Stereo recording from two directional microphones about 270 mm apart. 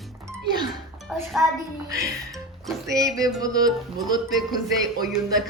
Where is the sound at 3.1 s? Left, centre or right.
Centre.